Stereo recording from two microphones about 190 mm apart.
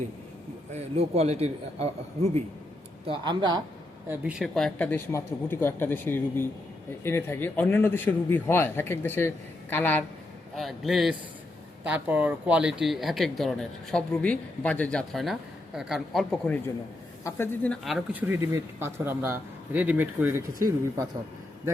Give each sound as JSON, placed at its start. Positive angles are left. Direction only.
{"t": 0.7, "sound": "a man's voice", "side_deg": -35}
{"t": 3.1, "sound": "speech", "side_deg": -25}
{"t": 4.1, "sound": "a man's voice", "side_deg": -5}
{"t": 17.2, "sound": "a man's voice", "side_deg": 10}
{"t": 18.3, "sound": "a man's voice", "side_deg": -15}